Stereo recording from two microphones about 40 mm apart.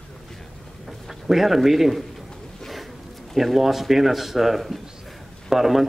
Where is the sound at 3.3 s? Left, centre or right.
Centre.